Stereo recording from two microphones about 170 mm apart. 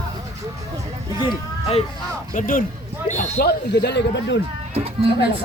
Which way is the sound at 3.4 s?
75° left (ahead or behind).